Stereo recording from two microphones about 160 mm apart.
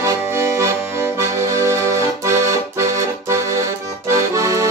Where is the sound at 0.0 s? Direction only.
15° right (ahead or behind).